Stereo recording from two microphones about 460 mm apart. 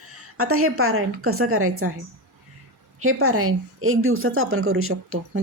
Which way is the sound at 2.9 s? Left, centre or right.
Right.